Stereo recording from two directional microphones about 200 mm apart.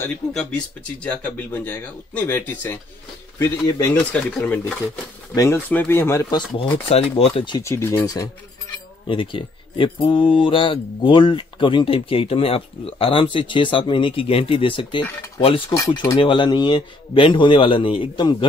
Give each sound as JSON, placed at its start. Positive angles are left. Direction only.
{"t": 0.0, "sound": "speech", "side_deg": 5}
{"t": 6.9, "sound": "speech", "side_deg": 30}